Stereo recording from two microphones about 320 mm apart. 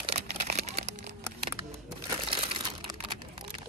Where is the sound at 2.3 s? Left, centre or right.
Centre.